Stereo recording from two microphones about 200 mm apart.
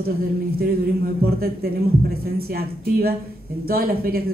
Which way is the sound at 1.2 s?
50° right (ahead or behind).